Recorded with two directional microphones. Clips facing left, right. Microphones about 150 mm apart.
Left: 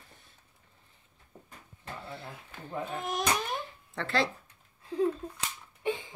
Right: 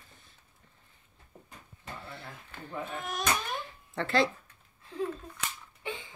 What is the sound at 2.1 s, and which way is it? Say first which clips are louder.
Speech: left 1 dB; 35° left (ahead or behind).